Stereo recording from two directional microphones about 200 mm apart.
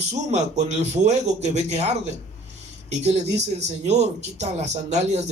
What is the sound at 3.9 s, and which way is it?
Speech, 35° right (ahead or behind).